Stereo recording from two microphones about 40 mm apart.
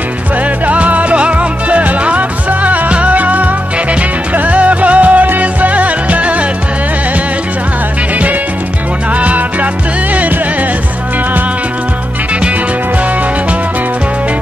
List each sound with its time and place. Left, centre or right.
0.7 s music: right
4.5 s music: right
9.2 s music: right